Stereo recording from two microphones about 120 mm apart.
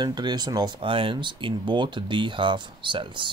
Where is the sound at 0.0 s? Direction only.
35° right (ahead or behind).